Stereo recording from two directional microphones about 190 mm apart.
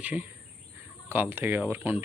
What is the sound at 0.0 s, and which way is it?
Speech, 10° right (ahead or behind).